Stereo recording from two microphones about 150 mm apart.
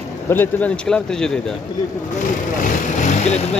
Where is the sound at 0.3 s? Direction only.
10° left (ahead or behind).